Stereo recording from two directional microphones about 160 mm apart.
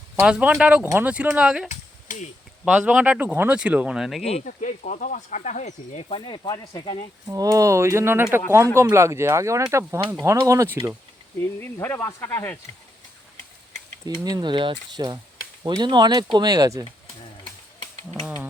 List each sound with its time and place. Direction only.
0.2 s speech: 10° right (ahead or behind)
1.7 s a sound: 50° left (ahead or behind)
2.6 s speech: 5° right (ahead or behind)
4.3 s speech: 45° left (ahead or behind); by 6.9 s 25° left (ahead or behind)
7.3 s speech: 20° right (ahead or behind)
11.8 s speech: 15° left (ahead or behind)
14.3 s speech: 25° right (ahead or behind)